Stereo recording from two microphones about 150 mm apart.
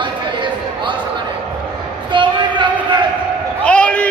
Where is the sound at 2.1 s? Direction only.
30° right (ahead or behind).